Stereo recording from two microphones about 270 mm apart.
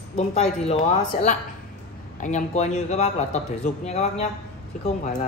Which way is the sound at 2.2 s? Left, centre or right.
Left.